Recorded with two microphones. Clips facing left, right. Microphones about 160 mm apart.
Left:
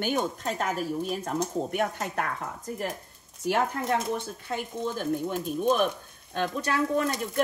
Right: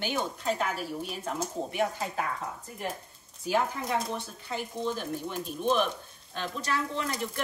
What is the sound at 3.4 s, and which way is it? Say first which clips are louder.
Speech: left 2 dB; 65° left (ahead or behind).